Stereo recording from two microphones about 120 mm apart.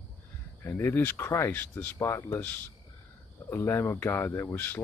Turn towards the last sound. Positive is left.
turn(degrees=20)  # may be behind; listen again after turning